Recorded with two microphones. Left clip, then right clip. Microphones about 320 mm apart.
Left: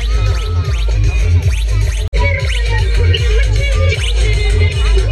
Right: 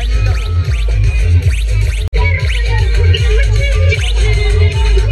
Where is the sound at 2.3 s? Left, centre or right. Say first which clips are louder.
Even; left.